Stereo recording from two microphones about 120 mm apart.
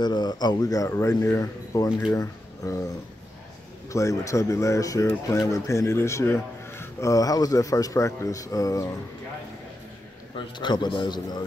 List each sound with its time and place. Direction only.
0.0 s a man's voice: 35° left (ahead or behind)
3.9 s speech: 25° left (ahead or behind)
10.3 s a man's voice: 40° left (ahead or behind)